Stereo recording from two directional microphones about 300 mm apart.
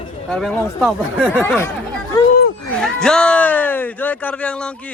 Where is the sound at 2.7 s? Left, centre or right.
Centre.